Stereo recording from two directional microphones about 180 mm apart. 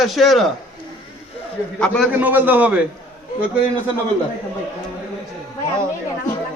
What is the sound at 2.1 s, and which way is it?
Speech, 10° right (ahead or behind).